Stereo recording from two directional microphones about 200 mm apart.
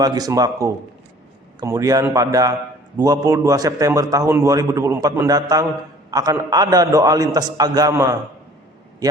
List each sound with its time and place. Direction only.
0.0 s a man's voice: 20° right (ahead or behind)